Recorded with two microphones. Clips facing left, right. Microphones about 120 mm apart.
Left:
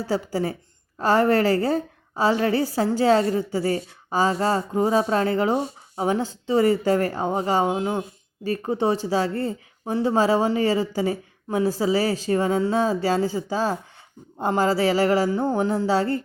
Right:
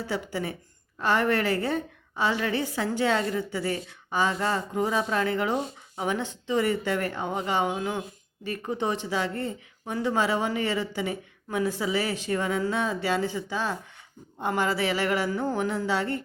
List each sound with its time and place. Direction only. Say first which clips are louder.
0.1 s a woman's voice: left 8 dB; 35° left (ahead or behind)